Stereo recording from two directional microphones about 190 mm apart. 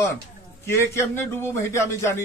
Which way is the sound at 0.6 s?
15° left (ahead or behind).